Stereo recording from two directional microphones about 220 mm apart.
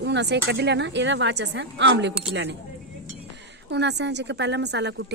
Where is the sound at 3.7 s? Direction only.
50° right (ahead or behind).